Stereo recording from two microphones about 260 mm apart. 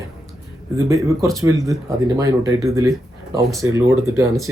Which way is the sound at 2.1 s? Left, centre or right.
Centre.